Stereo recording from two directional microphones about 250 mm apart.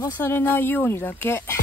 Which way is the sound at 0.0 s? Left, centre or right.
Centre.